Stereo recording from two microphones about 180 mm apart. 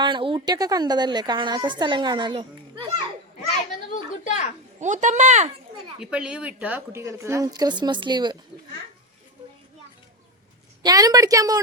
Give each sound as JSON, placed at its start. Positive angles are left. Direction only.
{"t": 0.0, "sound": "a woman's voice", "side_deg": -25}
{"t": 3.9, "sound": "a woman's voice", "side_deg": 40}
{"t": 4.8, "sound": "speech", "side_deg": -45}
{"t": 6.0, "sound": "speech", "side_deg": -5}
{"t": 10.8, "sound": "a woman's voice", "side_deg": -20}